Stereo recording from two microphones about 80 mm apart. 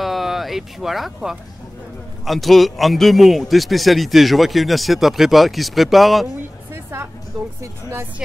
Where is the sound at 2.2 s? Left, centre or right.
Centre.